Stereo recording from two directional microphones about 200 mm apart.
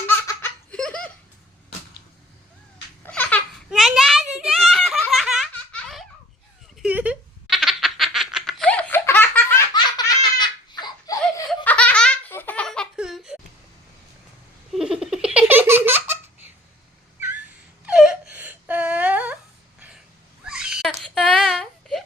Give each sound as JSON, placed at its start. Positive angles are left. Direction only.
{"t": 0.1, "sound": "laughter", "side_deg": 10}
{"t": 3.1, "sound": "a sound", "side_deg": 10}
{"t": 3.7, "sound": "giggle", "side_deg": 0}
{"t": 6.8, "sound": "baby laughter", "side_deg": -5}
{"t": 9.7, "sound": "laughter", "side_deg": 20}
{"t": 11.4, "sound": "laughter", "side_deg": 5}
{"t": 14.7, "sound": "laughter", "side_deg": -5}
{"t": 17.2, "sound": "cat", "side_deg": -10}
{"t": 17.8, "sound": "whimper", "side_deg": -5}
{"t": 20.4, "sound": "baby cry", "side_deg": -5}